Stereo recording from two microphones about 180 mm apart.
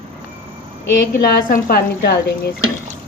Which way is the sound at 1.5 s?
55° left (ahead or behind).